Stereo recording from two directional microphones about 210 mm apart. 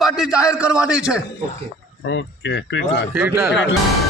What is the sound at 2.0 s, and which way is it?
Speech, 60° left (ahead or behind).